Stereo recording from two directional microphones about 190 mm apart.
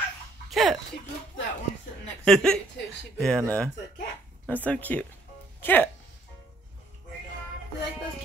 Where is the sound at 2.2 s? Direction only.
5° left (ahead or behind).